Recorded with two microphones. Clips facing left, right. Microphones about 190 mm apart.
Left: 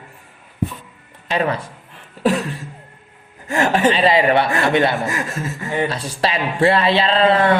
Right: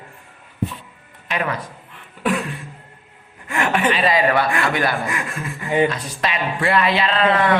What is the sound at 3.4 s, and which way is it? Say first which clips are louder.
Speech: left 4 dB; 40° left (ahead or behind).